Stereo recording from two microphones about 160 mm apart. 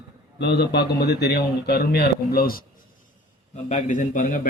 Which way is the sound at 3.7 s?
50° left (ahead or behind).